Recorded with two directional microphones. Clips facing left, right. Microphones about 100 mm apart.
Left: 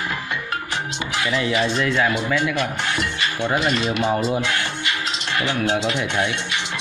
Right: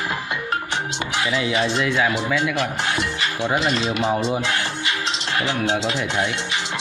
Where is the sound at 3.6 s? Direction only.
30° right (ahead or behind).